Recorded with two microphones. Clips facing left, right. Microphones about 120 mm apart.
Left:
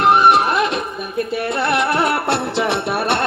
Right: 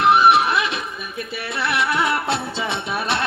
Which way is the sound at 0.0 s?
50° left (ahead or behind).